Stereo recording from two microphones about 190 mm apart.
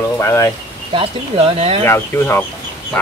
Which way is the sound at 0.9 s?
30° right (ahead or behind).